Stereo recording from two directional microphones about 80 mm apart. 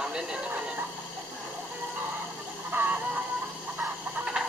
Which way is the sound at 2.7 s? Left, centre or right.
Right.